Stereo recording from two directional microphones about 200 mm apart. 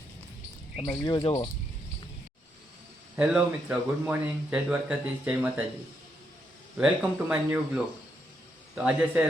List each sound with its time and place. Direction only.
0.8 s speech: 20° left (ahead or behind)
3.2 s speech: 5° right (ahead or behind)
6.7 s a man's voice: 5° right (ahead or behind)